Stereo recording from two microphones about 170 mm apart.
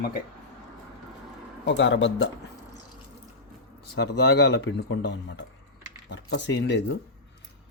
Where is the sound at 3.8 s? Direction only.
75° left (ahead or behind).